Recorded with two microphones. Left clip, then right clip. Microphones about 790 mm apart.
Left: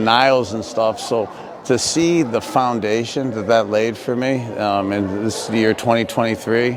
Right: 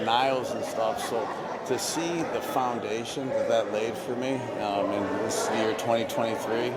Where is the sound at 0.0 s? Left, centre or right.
Left.